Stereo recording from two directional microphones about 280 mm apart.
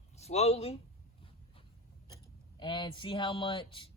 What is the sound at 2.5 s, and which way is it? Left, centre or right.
Speech, centre.